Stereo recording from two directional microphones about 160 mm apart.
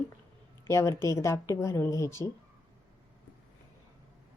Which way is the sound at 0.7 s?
15° left (ahead or behind).